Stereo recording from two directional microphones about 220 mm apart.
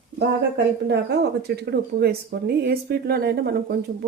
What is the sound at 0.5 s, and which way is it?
Speech, 50° right (ahead or behind).